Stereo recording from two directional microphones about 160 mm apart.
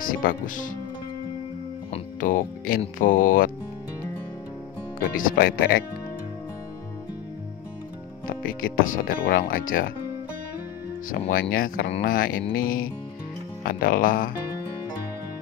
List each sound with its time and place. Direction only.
0.0 s speech: 60° left (ahead or behind)
2.1 s speech: 60° left (ahead or behind)
5.0 s speech: 60° left (ahead or behind)
8.3 s speech: 65° left (ahead or behind)
11.2 s speech: 75° left (ahead or behind)
11.5 s speech: 60° left (ahead or behind)